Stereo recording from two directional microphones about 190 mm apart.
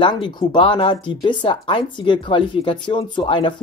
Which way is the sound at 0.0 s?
25° left (ahead or behind).